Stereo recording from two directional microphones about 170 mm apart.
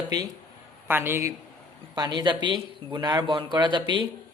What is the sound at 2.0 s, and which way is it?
Speech, 25° right (ahead or behind).